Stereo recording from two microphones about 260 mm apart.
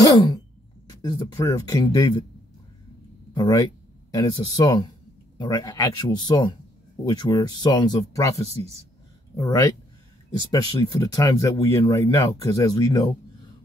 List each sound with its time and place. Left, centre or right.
0.0 s a sound: centre
0.8 s speech: centre
3.3 s speech: centre